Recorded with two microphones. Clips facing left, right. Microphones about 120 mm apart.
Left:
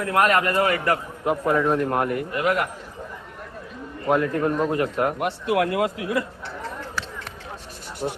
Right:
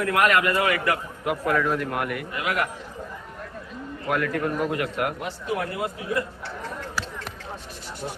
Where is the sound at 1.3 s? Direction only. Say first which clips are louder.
Left 3 dB; 25° left (ahead or behind).